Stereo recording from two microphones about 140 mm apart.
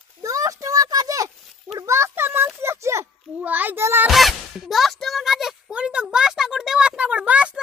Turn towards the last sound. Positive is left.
turn(degrees=-10)  # may be behind; listen again after turning